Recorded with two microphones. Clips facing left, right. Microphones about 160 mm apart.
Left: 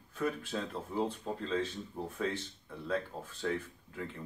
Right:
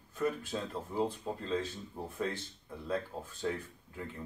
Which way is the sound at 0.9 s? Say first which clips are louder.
Right 1 dB; 10° right (ahead or behind).